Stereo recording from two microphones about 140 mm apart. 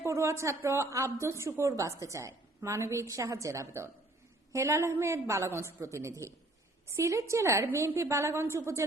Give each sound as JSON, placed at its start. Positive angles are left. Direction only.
{"t": 0.0, "sound": "a woman's voice", "side_deg": -20}